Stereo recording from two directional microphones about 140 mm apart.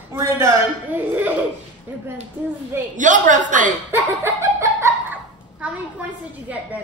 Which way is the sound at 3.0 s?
65° right (ahead or behind).